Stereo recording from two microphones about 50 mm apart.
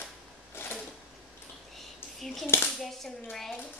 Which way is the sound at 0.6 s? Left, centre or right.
Left.